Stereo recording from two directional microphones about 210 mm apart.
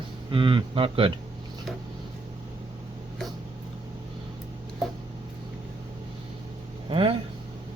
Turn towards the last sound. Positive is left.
turn(degrees=-25)  # may be behind; listen again after turning